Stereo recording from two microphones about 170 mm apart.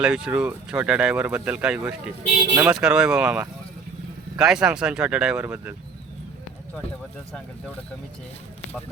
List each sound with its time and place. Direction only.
0.0 s speech: 5° right (ahead or behind)